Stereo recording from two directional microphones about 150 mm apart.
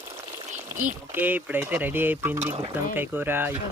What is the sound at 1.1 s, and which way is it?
Speech, 10° right (ahead or behind).